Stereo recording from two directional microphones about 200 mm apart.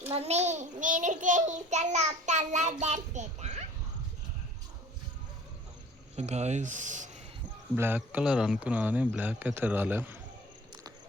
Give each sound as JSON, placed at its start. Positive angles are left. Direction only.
{"t": 0.1, "sound": "a child's voice", "side_deg": -30}
{"t": 6.1, "sound": "a child's voice", "side_deg": -35}
{"t": 7.8, "sound": "speech", "side_deg": -10}